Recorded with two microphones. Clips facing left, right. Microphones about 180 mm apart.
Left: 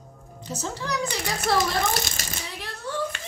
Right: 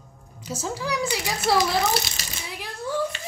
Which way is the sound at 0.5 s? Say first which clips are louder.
Right 2 dB; 10° right (ahead or behind).